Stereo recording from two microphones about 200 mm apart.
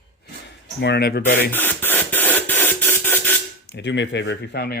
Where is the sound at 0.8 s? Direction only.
55° left (ahead or behind).